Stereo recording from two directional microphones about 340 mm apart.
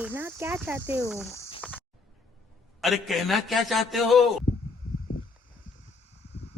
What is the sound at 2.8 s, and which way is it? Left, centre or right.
Speech, centre.